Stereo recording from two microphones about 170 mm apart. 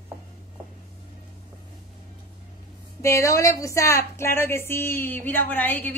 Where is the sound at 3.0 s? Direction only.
15° left (ahead or behind).